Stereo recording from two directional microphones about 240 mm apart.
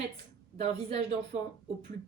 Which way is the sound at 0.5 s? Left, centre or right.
Right.